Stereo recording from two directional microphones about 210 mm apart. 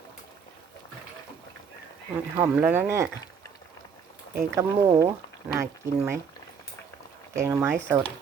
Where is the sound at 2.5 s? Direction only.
5° right (ahead or behind).